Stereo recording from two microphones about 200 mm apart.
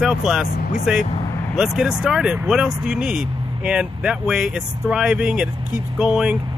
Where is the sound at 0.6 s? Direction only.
40° left (ahead or behind).